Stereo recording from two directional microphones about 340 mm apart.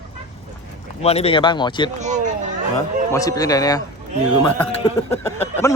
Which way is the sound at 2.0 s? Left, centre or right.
Right.